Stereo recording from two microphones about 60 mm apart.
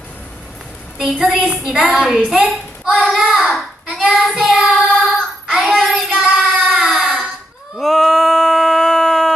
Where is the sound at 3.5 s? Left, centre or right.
Centre.